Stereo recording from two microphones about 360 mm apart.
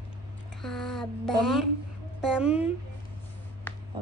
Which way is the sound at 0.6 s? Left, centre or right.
Centre.